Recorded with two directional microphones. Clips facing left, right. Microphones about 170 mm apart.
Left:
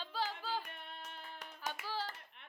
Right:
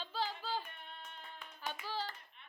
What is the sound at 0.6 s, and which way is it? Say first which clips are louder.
Music: left 2 dB; 90° left.